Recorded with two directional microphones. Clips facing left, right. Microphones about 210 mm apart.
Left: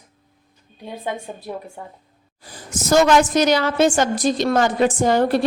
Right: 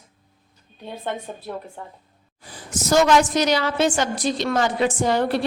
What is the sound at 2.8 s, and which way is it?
A woman's voice, 50° left (ahead or behind).